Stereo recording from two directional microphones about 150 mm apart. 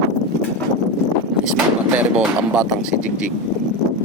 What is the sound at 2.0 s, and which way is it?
Speech, 10° right (ahead or behind).